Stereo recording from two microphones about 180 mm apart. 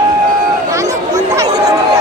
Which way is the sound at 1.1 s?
20° right (ahead or behind).